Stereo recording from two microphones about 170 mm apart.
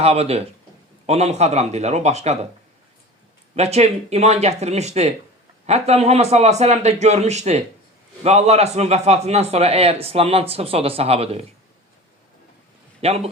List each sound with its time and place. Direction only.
0.0 s a man's voice: 35° right (ahead or behind)
3.5 s a man's voice: 40° right (ahead or behind)
13.0 s speech: 35° right (ahead or behind)